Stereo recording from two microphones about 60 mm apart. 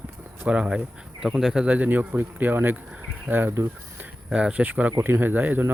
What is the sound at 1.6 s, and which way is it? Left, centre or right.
Speech, right.